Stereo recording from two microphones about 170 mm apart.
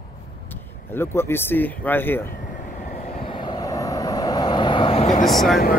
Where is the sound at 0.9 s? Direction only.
15° left (ahead or behind).